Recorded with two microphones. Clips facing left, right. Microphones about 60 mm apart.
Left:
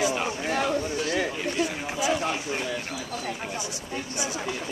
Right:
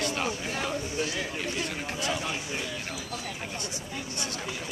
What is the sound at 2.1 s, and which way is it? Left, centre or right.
Speech, left.